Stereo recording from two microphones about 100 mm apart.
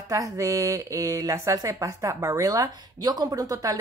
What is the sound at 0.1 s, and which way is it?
A woman's voice, 35° right (ahead or behind).